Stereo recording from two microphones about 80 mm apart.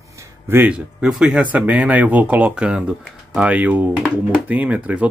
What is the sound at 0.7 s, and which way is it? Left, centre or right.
Speech, centre.